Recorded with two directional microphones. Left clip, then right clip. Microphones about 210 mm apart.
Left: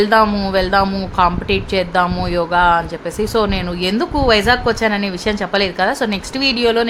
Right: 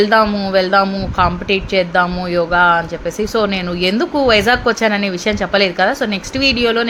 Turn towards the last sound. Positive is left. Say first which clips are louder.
# right 1 dB
turn(degrees=0)  # may be behind; listen again after turning